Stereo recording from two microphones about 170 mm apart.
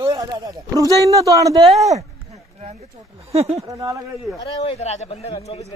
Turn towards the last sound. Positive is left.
turn(degrees=40)  # may be behind; listen again after turning